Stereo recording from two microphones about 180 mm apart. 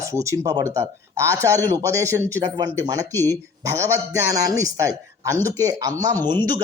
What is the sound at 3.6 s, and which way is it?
Speech, 20° right (ahead or behind).